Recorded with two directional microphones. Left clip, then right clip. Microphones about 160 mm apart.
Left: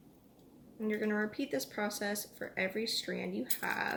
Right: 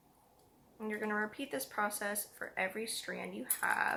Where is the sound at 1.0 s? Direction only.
45° left (ahead or behind).